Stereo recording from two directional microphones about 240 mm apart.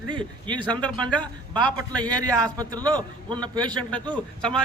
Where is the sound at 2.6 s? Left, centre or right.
Centre.